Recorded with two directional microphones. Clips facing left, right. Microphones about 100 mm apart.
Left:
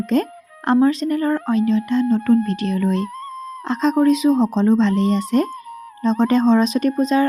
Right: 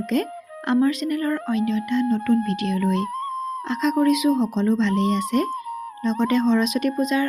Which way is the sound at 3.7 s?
35° left (ahead or behind).